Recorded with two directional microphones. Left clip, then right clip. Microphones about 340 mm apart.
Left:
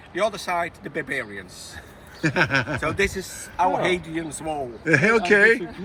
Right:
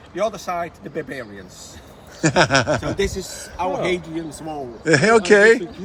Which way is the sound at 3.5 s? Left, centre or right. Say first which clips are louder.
Left 2 dB; left.